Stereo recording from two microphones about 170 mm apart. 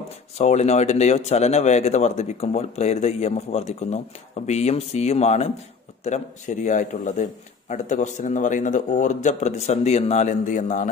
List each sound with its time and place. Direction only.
0.4 s speech: 40° left (ahead or behind)